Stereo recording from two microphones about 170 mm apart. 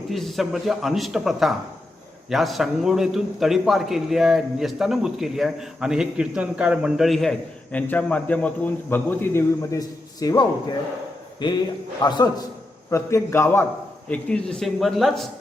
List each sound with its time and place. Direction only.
0.1 s a man's voice: centre (ahead or behind); by 10.4 s 20° left (ahead or behind)
11.4 s a man's voice: 30° left (ahead or behind); by 15.3 s centre (ahead or behind)